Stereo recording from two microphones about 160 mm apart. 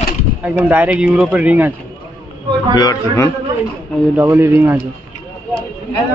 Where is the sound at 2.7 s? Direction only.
20° left (ahead or behind).